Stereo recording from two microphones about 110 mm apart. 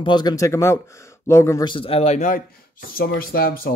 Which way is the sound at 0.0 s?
40° left (ahead or behind).